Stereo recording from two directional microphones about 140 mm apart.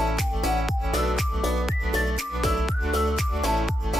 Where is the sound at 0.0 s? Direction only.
Centre (ahead or behind).